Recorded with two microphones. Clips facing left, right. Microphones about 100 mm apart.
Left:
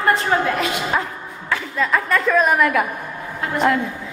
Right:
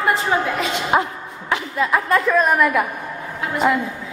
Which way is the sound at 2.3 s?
Centre (ahead or behind).